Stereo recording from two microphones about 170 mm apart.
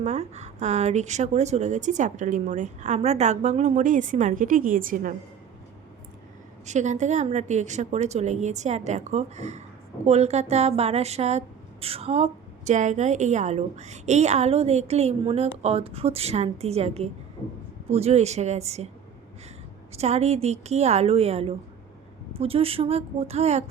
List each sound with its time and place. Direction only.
0.0 s a woman's voice: 40° right (ahead or behind)
6.7 s a woman's voice: 45° right (ahead or behind)
19.9 s a woman's voice: 40° right (ahead or behind)